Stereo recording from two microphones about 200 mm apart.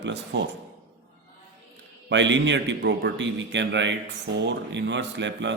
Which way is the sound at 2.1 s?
65° right (ahead or behind).